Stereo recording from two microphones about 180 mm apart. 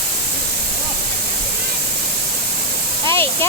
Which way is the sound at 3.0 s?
15° left (ahead or behind).